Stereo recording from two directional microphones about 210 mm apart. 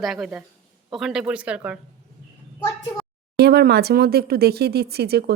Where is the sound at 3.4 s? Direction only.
50° right (ahead or behind).